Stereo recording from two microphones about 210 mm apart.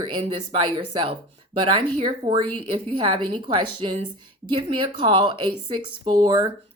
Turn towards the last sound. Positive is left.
turn(degrees=-20)  # may be behind; listen again after turning